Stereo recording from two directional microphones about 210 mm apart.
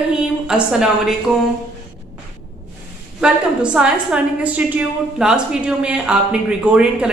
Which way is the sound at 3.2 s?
5° right (ahead or behind).